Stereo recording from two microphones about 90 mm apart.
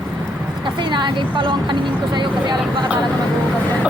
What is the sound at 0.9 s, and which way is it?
Speech, 60° right (ahead or behind).